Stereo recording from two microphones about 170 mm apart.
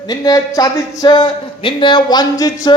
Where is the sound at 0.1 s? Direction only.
20° left (ahead or behind).